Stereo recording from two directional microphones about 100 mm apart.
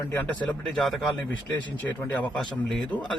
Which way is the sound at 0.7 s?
Centre (ahead or behind).